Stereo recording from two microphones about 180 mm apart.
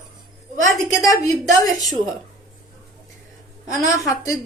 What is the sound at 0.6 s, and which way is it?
Speech, 20° left (ahead or behind).